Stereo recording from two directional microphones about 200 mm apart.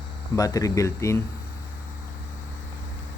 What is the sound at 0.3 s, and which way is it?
Speech, 15° left (ahead or behind).